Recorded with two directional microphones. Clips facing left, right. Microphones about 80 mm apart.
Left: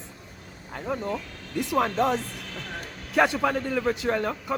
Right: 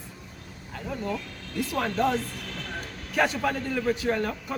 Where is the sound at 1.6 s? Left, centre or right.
Centre.